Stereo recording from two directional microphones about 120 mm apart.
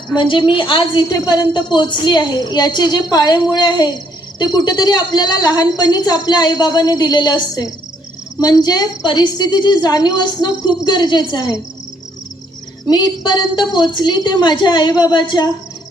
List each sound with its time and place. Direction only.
0.1 s speech: 40° left (ahead or behind)
12.9 s speech: 35° left (ahead or behind)